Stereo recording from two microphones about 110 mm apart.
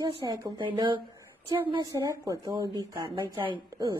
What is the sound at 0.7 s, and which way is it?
A woman's voice, 45° right (ahead or behind).